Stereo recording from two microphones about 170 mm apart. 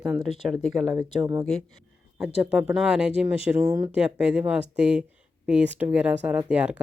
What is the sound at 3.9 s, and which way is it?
Speech, 5° right (ahead or behind).